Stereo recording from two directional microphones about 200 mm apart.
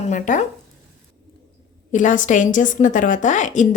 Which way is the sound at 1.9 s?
40° left (ahead or behind).